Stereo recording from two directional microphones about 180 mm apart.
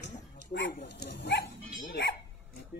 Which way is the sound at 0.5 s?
55° left (ahead or behind).